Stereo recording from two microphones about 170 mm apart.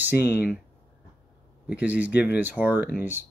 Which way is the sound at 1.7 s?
10° right (ahead or behind).